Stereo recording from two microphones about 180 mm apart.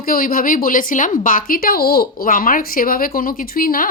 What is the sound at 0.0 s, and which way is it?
A woman's voice, 55° left (ahead or behind).